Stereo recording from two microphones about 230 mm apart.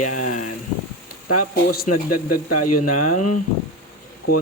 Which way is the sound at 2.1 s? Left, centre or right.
Left.